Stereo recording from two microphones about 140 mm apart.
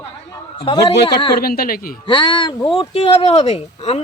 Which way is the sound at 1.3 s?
90° left.